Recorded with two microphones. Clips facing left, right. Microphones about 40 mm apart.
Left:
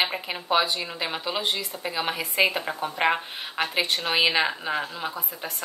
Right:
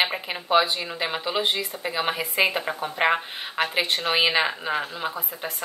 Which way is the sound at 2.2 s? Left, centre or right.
Right.